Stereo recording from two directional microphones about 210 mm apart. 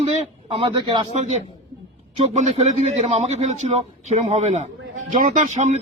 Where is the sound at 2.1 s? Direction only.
30° right (ahead or behind).